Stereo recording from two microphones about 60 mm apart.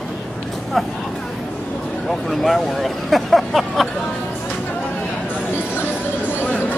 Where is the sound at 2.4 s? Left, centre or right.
Centre.